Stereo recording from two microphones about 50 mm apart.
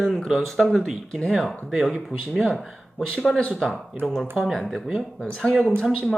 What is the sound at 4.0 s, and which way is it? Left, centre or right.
Speech, right.